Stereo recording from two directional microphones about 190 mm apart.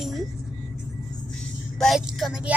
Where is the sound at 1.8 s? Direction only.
Centre (ahead or behind).